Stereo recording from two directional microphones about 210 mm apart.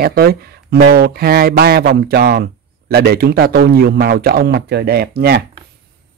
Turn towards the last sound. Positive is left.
turn(degrees=-50)  # may be behind; listen again after turning